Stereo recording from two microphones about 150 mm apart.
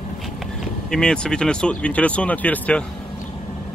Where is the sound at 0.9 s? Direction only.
5° left (ahead or behind).